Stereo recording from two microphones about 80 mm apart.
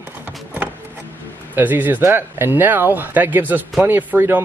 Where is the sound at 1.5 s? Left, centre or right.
Right.